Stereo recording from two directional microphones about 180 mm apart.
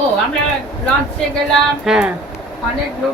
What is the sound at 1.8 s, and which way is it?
Speech, 5° right (ahead or behind).